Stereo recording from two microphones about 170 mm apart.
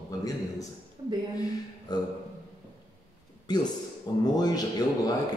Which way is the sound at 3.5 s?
25° left (ahead or behind).